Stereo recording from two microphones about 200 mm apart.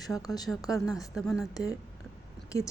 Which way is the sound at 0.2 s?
20° left (ahead or behind).